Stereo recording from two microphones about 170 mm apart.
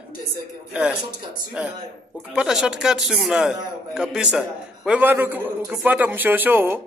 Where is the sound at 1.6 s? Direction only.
5° right (ahead or behind).